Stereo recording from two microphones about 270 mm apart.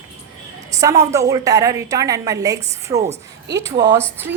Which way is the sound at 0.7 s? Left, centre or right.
Centre.